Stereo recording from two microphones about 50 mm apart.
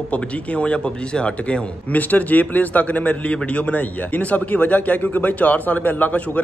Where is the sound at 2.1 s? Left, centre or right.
Left.